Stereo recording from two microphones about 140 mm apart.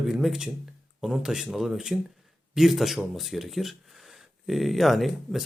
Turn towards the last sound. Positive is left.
turn(degrees=0)  # may be behind; listen again after turning